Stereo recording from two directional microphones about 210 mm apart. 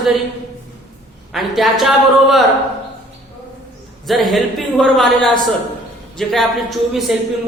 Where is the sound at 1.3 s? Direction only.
Centre (ahead or behind).